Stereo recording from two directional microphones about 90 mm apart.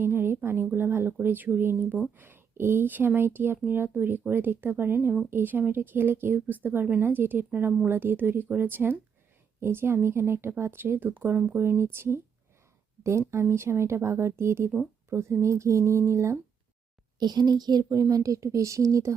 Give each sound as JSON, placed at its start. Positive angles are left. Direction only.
{"t": 0.0, "sound": "a woman's voice", "side_deg": -25}
{"t": 17.2, "sound": "speech", "side_deg": -50}